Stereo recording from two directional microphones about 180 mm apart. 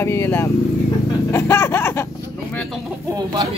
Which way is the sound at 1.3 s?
15° left (ahead or behind).